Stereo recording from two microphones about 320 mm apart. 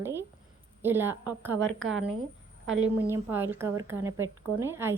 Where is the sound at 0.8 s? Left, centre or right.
Centre.